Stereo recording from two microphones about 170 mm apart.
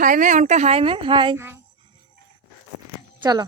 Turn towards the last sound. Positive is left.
turn(degrees=-25)  # may be behind; listen again after turning